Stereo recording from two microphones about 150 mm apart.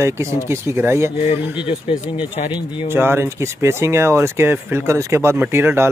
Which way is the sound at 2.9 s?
15° right (ahead or behind).